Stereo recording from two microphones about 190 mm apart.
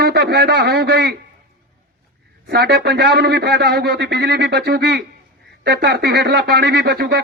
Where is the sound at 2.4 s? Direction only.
60° right (ahead or behind).